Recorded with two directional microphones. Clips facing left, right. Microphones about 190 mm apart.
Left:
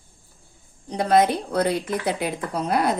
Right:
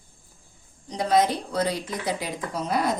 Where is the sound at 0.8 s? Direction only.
60° left (ahead or behind).